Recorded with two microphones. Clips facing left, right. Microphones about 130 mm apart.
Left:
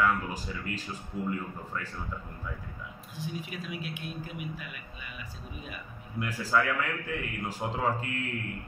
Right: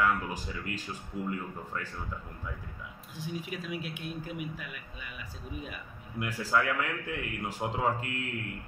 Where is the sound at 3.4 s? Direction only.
90° left.